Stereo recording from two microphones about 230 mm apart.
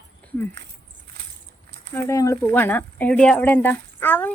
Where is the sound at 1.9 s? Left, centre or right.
Centre.